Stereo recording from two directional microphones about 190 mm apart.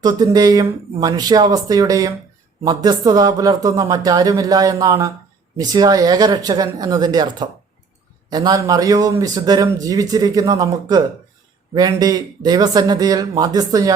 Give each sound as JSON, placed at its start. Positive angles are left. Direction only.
{"t": 0.0, "sound": "speech", "side_deg": -20}